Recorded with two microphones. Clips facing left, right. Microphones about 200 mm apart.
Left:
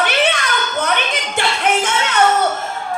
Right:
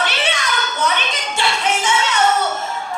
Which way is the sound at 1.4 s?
55° left (ahead or behind).